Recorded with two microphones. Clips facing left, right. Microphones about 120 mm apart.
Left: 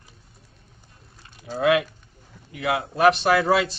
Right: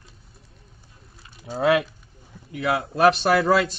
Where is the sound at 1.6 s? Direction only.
35° right (ahead or behind).